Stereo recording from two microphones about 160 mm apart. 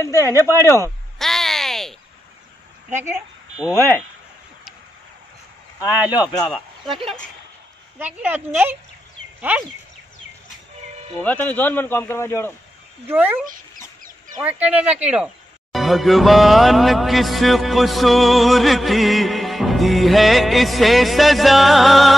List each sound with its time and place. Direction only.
0.0 s a man's voice: 20° left (ahead or behind)
1.1 s a sound: centre (ahead or behind)
3.5 s a man's voice: 15° left (ahead or behind)
6.1 s speech: 25° left (ahead or behind)
6.4 s speech: 5° left (ahead or behind)
8.0 s a woman's voice: 10° right (ahead or behind)
11.2 s a man's voice: 10° left (ahead or behind)
13.1 s a woman's voice: 10° right (ahead or behind)